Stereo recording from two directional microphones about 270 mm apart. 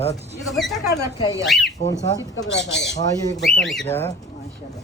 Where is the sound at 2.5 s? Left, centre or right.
Left.